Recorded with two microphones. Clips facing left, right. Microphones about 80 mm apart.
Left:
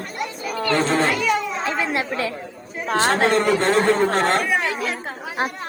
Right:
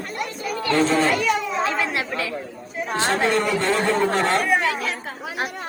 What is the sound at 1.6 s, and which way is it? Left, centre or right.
Chatter, left.